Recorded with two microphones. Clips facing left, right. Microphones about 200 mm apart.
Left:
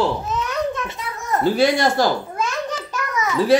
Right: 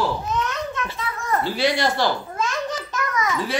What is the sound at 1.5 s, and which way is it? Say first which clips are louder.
Speech: left 4 dB; 50° left (ahead or behind).